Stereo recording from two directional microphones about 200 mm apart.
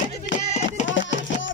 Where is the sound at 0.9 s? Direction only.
65° left (ahead or behind).